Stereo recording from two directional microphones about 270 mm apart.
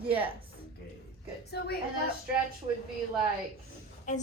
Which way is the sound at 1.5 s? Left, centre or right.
Left.